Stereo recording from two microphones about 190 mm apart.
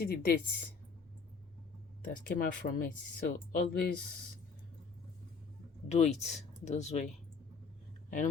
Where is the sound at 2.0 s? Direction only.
45° left (ahead or behind).